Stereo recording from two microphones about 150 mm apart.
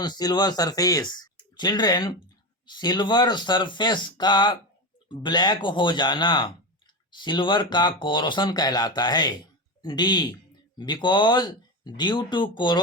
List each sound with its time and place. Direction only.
0.0 s speech: 25° left (ahead or behind)